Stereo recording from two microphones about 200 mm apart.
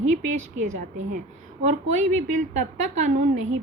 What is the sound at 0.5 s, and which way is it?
A woman's voice, 40° right (ahead or behind).